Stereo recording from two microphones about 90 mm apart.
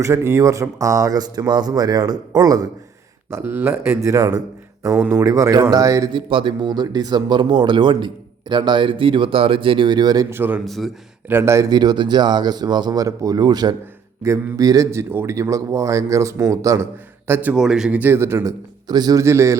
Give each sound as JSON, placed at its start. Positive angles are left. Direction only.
{"t": 0.0, "sound": "speech", "side_deg": -35}
{"t": 3.2, "sound": "speech", "side_deg": -25}
{"t": 6.1, "sound": "speech", "side_deg": -70}
{"t": 10.2, "sound": "a man's voice", "side_deg": -25}
{"t": 10.7, "sound": "a man's voice", "side_deg": 0}
{"t": 11.3, "sound": "a man's voice", "side_deg": -25}
{"t": 11.7, "sound": "speech", "side_deg": -50}
{"t": 14.2, "sound": "speech", "side_deg": -35}
{"t": 14.8, "sound": "speech", "side_deg": -25}
{"t": 17.5, "sound": "speech", "side_deg": -5}
{"t": 18.0, "sound": "a man's voice", "side_deg": -25}
{"t": 18.9, "sound": "speech", "side_deg": -50}
{"t": 19.2, "sound": "speech", "side_deg": -30}